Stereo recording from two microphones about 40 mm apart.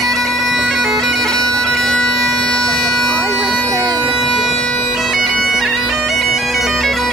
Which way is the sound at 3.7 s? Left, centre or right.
Right.